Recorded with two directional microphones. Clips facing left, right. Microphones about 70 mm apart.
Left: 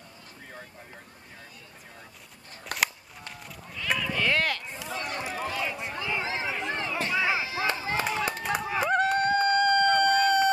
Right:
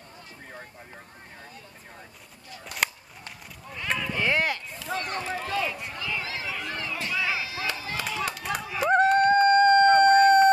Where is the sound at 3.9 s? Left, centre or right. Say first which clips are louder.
Right 1 dB; centre.